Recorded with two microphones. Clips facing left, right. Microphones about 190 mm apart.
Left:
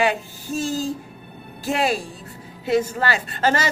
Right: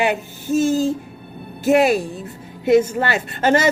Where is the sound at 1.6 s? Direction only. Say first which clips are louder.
Right 8 dB; 20° right (ahead or behind).